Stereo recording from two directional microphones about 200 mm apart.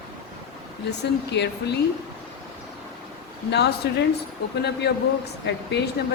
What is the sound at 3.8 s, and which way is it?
A woman's voice, 55° left (ahead or behind).